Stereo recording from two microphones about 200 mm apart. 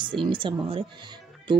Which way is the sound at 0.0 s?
25° right (ahead or behind).